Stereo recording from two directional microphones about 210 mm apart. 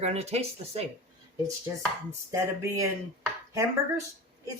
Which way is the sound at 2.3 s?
15° right (ahead or behind).